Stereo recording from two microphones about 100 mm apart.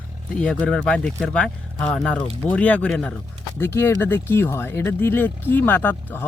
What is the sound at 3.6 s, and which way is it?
Speech, 25° left (ahead or behind).